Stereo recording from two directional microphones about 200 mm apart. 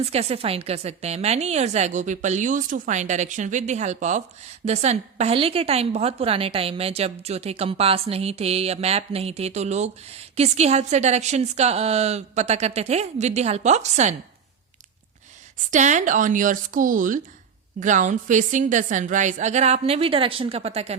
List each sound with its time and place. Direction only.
0.0 s a woman's voice: 30° right (ahead or behind)
15.7 s a woman's voice: 35° right (ahead or behind)